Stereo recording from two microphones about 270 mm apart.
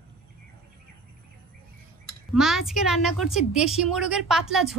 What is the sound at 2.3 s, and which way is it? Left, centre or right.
A woman's voice, centre.